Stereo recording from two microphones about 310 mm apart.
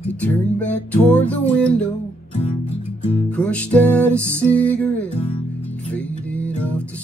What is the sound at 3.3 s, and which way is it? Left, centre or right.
Music, centre.